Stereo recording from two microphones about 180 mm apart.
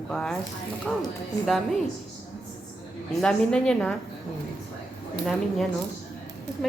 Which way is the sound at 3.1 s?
5° left (ahead or behind).